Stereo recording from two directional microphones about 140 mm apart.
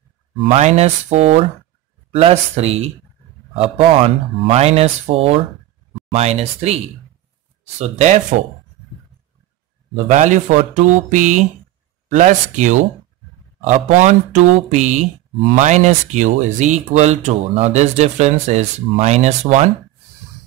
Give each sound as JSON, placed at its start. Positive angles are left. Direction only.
{"t": 0.5, "sound": "speech", "side_deg": -50}
{"t": 7.8, "sound": "speech", "side_deg": -55}
{"t": 10.0, "sound": "speech", "side_deg": -60}